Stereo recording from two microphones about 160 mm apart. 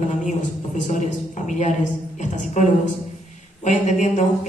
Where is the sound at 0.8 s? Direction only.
50° left (ahead or behind).